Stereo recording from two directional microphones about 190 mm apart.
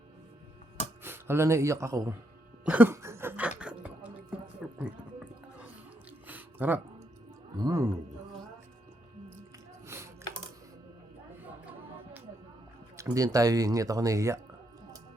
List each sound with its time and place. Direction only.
1.0 s speech: 10° right (ahead or behind)
2.6 s a sound: 10° right (ahead or behind)
7.6 s a man's voice: 20° right (ahead or behind)
9.8 s music: 15° right (ahead or behind)
13.0 s speech: 20° right (ahead or behind)